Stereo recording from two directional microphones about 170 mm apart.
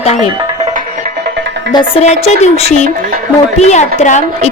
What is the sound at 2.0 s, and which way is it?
Music, 40° left (ahead or behind).